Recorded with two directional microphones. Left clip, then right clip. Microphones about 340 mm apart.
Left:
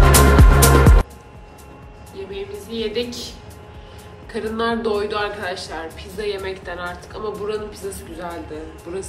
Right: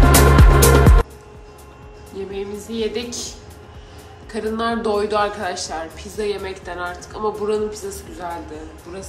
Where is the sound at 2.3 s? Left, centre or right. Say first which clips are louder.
Right 1 dB; right.